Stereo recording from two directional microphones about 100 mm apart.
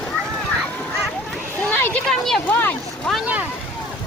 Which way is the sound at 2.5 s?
20° left (ahead or behind).